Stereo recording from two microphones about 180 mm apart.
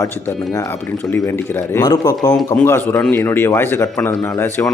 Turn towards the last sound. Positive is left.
turn(degrees=15)  # may be behind; listen again after turning